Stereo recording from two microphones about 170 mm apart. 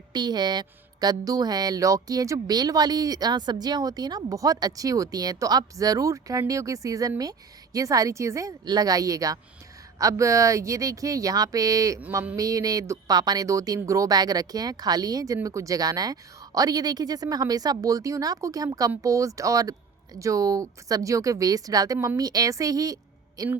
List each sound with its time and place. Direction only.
0.1 s a woman's voice: 25° right (ahead or behind)